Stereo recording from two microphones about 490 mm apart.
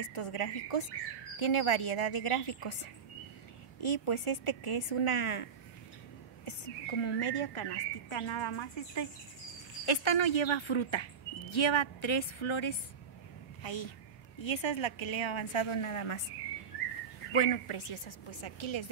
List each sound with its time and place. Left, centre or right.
0.0 s a woman's voice: left
1.4 s a woman's voice: left
17.3 s a woman's voice: left